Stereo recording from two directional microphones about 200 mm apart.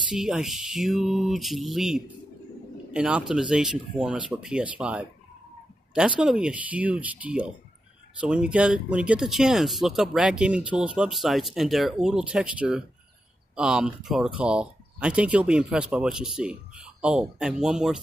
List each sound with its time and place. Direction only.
0.1 s speech: centre (ahead or behind)